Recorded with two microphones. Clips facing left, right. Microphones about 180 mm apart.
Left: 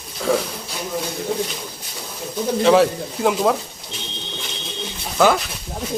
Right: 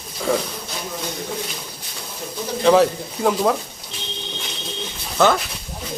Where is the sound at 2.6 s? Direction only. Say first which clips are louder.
Even; centre (ahead or behind).